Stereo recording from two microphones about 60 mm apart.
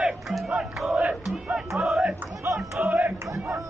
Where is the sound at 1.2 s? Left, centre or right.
Centre.